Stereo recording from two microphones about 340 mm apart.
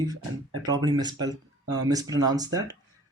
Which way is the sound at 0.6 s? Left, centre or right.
Centre.